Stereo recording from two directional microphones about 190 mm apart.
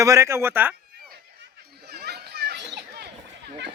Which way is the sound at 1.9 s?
60° right (ahead or behind).